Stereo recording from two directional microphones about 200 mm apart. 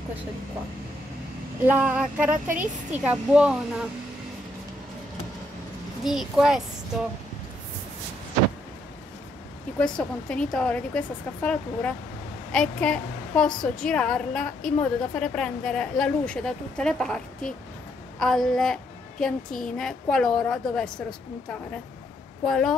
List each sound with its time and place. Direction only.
1.7 s a sound: 5° right (ahead or behind)
2.3 s a woman's voice: 40° right (ahead or behind)
2.6 s a woman's voice: 5° right (ahead or behind)
6.0 s a woman's voice: centre (ahead or behind)
9.9 s a woman's voice: 5° left (ahead or behind)
22.4 s a woman's voice: centre (ahead or behind)